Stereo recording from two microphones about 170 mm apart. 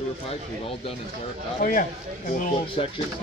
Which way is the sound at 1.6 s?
50° left (ahead or behind).